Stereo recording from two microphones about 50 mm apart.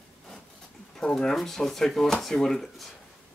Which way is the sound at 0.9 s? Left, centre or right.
Centre.